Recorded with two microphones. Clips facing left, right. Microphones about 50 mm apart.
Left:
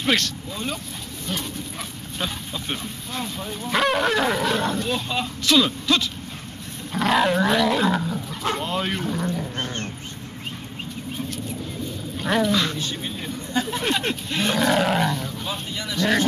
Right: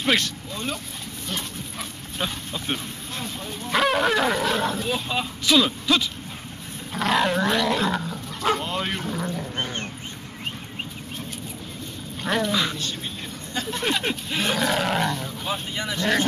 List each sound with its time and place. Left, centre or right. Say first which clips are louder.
0.5 s speech: left 1 dB; centre
2.1 s speech: even; centre
9.6 s roaring cats: even; centre
12.2 s speech: left 2 dB; centre
12.7 s speech: left 2 dB; centre
15.7 s speech: left 1 dB; centre